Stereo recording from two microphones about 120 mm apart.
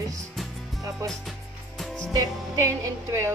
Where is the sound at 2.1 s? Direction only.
30° right (ahead or behind).